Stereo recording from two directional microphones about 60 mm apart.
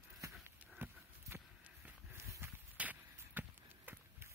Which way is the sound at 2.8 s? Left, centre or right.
Right.